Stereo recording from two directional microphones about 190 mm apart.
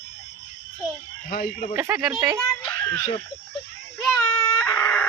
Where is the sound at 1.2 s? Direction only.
45° left (ahead or behind).